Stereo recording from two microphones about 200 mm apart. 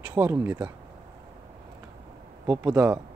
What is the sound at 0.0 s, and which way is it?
Speech, 10° right (ahead or behind).